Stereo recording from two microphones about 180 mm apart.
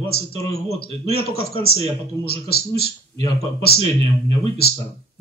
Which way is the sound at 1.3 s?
60° left (ahead or behind).